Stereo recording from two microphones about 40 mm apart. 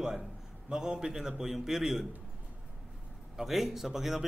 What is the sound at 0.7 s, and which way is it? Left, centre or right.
Speech, centre.